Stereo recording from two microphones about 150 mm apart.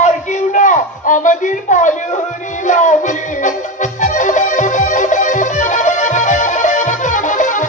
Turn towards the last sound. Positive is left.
turn(degrees=55)  # may be behind; listen again after turning